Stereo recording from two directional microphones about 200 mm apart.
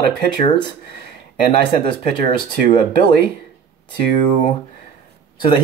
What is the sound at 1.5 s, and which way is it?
Speech, 25° left (ahead or behind).